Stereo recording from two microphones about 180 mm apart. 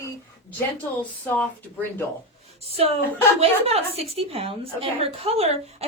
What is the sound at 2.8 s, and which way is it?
A woman's voice, 35° right (ahead or behind).